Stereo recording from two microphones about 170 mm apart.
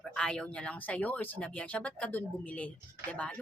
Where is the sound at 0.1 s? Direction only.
5° left (ahead or behind).